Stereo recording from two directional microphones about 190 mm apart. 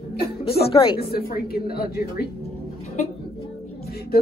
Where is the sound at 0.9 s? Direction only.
55° left (ahead or behind).